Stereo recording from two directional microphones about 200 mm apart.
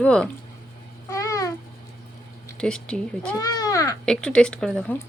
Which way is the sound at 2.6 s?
5° left (ahead or behind).